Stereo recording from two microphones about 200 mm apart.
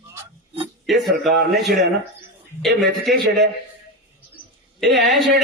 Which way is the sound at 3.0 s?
Centre (ahead or behind).